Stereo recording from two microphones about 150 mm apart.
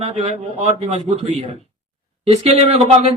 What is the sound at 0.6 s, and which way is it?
Speech, 45° right (ahead or behind).